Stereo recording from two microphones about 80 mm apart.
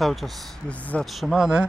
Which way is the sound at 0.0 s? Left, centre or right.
Centre.